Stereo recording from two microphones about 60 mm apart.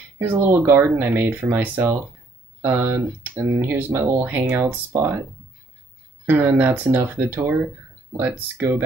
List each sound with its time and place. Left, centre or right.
0.2 s speech: right
6.3 s speech: right